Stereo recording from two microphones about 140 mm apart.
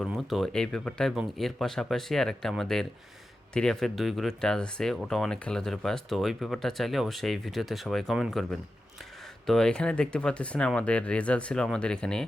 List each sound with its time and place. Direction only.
0.0 s speech: centre (ahead or behind)
9.5 s speech: 5° left (ahead or behind)